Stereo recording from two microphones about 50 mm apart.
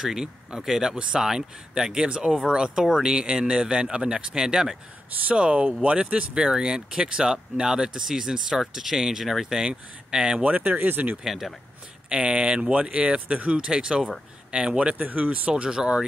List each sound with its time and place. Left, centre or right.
0.0 s speech: centre
10.4 s speech: right
11.2 s speech: centre
12.1 s speech: right
15.5 s speech: centre